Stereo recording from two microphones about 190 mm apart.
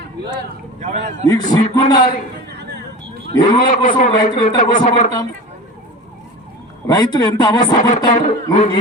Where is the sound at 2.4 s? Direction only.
60° right (ahead or behind).